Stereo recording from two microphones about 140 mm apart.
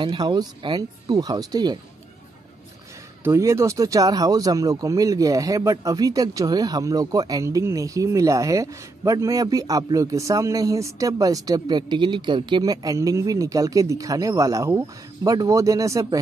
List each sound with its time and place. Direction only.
0.0 s speech: 35° right (ahead or behind)
3.3 s speech: 20° right (ahead or behind)